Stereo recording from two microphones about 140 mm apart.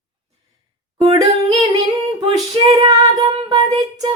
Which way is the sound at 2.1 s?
30° right (ahead or behind).